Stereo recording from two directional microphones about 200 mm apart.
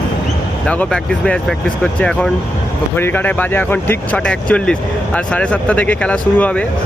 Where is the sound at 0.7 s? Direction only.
5° left (ahead or behind).